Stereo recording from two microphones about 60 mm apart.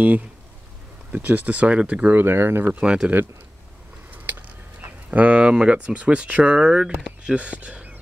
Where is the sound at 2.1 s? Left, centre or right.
Right.